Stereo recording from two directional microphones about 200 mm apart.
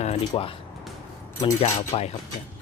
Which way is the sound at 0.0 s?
30° left (ahead or behind).